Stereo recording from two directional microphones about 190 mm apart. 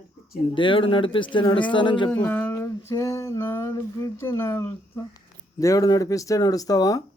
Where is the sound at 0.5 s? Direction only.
25° left (ahead or behind).